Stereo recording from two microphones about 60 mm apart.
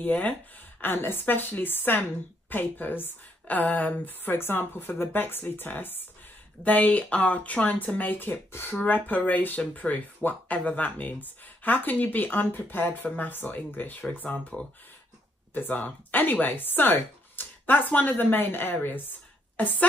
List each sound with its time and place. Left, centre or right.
0.0 s a woman's voice: left